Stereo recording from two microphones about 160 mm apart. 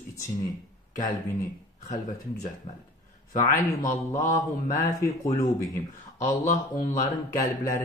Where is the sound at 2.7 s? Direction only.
40° left (ahead or behind).